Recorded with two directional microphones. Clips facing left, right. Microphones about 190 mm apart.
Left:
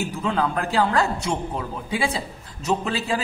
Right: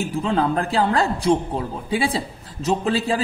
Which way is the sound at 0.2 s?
30° right (ahead or behind).